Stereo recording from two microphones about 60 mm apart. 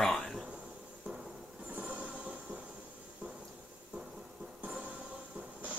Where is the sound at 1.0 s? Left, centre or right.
Centre.